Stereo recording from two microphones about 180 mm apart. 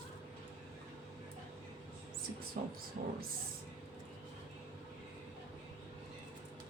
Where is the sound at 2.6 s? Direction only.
50° right (ahead or behind).